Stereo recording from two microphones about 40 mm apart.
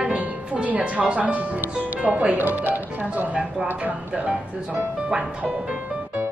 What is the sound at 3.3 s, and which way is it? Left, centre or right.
Speech, right.